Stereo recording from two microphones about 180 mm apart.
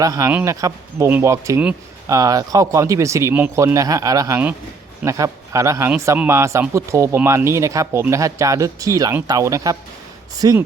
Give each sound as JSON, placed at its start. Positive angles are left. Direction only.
{"t": 0.0, "sound": "speech", "side_deg": -20}